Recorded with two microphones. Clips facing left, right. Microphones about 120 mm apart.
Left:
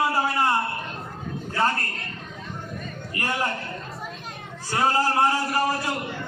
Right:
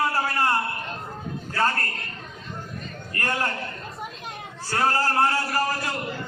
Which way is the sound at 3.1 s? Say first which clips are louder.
Even; 15° left (ahead or behind).